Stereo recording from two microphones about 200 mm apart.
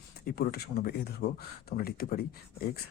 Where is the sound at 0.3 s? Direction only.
50° left (ahead or behind).